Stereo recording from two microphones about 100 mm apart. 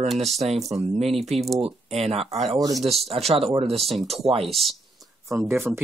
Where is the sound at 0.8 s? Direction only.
90° right.